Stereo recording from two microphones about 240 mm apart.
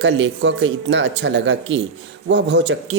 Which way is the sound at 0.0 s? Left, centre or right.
Right.